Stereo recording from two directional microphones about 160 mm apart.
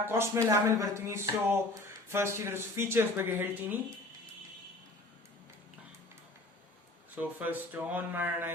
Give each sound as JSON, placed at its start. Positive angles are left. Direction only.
{"t": 0.0, "sound": "speech", "side_deg": -15}
{"t": 7.2, "sound": "speech", "side_deg": -10}